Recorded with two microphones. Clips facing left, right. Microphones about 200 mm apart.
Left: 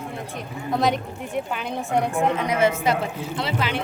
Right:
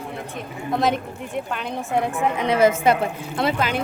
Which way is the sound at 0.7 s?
Centre (ahead or behind).